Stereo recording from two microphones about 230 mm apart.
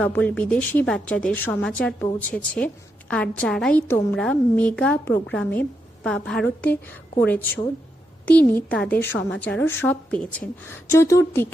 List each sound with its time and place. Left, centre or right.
0.0 s a woman's voice: centre
8.2 s a woman's voice: centre